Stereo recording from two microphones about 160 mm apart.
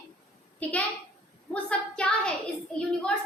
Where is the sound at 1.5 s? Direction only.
5° left (ahead or behind).